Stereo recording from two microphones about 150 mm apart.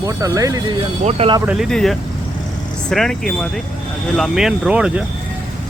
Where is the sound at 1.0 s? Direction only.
50° right (ahead or behind).